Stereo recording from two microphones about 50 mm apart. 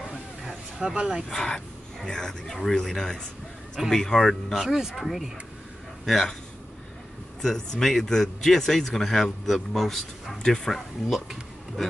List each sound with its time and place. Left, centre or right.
0.1 s a sound: centre
0.9 s speech: centre
1.3 s speech: centre
7.4 s speech: centre